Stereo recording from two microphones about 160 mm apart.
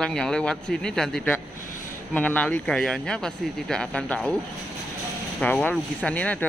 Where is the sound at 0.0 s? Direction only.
5° left (ahead or behind).